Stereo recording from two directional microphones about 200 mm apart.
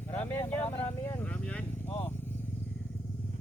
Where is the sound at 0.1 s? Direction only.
10° left (ahead or behind).